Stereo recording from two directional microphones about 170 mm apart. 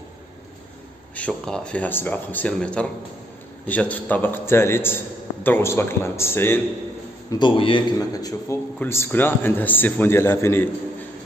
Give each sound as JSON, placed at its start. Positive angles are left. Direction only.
{"t": 1.1, "sound": "a man's voice", "side_deg": 5}
{"t": 7.2, "sound": "a man's voice", "side_deg": 25}